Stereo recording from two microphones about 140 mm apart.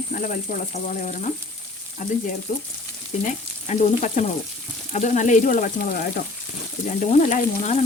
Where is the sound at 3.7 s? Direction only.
55° left (ahead or behind).